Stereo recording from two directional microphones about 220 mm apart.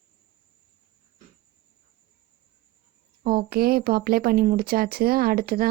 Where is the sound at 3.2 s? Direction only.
45° right (ahead or behind).